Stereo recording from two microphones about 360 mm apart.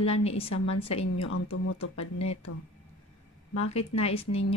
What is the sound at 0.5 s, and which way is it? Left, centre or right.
Speech, left.